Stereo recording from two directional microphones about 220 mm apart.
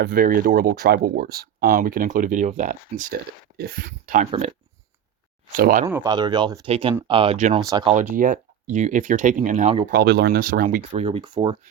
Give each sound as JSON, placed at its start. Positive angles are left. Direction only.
{"t": 0.0, "sound": "speech", "side_deg": -40}
{"t": 5.5, "sound": "speech", "side_deg": -40}
{"t": 5.8, "sound": "speech", "side_deg": -15}
{"t": 7.6, "sound": "speech", "side_deg": -20}
{"t": 7.9, "sound": "speech", "side_deg": -35}
{"t": 9.9, "sound": "speech", "side_deg": -50}
{"t": 11.0, "sound": "speech", "side_deg": -25}